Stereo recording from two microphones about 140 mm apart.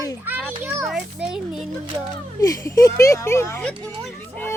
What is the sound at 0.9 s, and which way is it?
Speech, 5° right (ahead or behind).